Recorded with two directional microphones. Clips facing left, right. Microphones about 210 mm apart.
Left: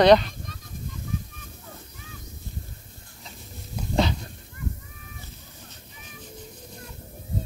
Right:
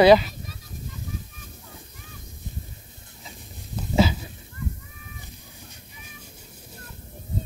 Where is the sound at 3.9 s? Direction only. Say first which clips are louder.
Right 3 dB; 5° right (ahead or behind).